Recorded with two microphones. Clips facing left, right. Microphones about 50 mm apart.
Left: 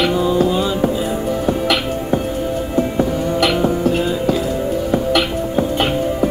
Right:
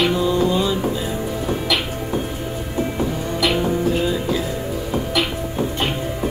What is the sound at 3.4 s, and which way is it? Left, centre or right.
Music, left.